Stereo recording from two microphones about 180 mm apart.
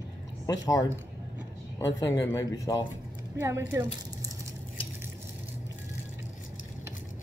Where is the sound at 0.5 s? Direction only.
20° left (ahead or behind).